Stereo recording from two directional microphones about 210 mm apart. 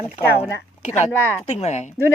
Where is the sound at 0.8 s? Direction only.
35° left (ahead or behind).